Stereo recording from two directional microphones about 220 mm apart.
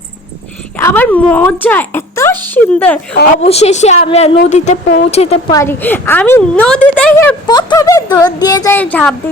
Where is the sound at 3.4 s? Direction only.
30° left (ahead or behind).